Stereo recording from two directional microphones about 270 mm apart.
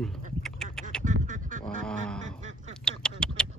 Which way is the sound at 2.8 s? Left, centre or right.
Centre.